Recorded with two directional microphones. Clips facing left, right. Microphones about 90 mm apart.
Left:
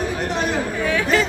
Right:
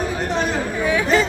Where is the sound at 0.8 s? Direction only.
15° right (ahead or behind).